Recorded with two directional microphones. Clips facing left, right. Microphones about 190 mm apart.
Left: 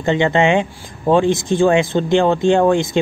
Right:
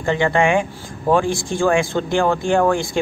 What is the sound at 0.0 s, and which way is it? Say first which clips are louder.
Speech: left 2 dB; 20° left (ahead or behind).